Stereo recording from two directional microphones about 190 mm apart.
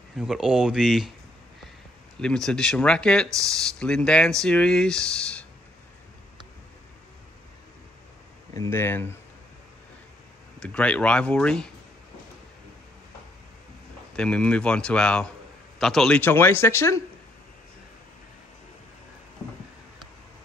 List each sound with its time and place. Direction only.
0.2 s speech: 5° right (ahead or behind)
2.1 s speech: 5° left (ahead or behind)
3.3 s speech: 15° right (ahead or behind)
3.5 s speech: 5° left (ahead or behind)
8.5 s speech: 15° left (ahead or behind)
10.6 s speech: 5° left (ahead or behind)
14.1 s speech: 5° left (ahead or behind)